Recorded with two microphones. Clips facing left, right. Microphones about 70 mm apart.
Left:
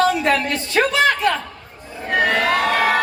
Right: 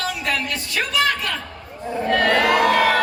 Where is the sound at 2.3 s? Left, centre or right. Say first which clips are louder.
Right 2 dB; centre.